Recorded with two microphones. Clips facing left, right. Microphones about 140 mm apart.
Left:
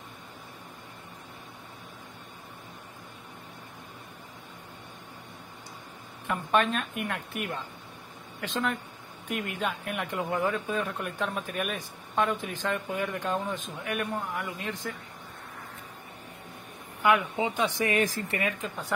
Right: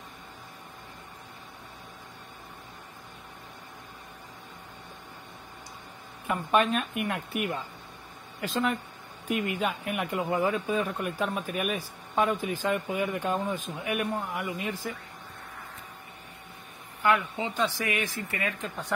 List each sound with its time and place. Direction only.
6.2 s speech: 5° right (ahead or behind)
17.0 s speech: 15° left (ahead or behind)
17.7 s speech: 35° left (ahead or behind)
18.6 s speech: centre (ahead or behind)